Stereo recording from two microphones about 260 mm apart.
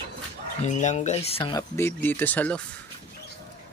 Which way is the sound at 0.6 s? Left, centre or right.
Left.